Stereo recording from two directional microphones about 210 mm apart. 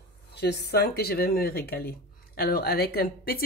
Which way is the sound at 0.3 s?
50° left (ahead or behind).